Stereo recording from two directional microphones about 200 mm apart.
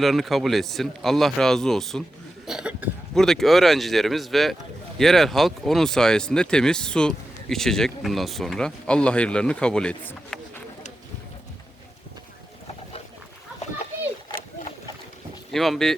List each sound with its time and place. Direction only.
0.0 s speech: centre (ahead or behind)
15.5 s speech: centre (ahead or behind)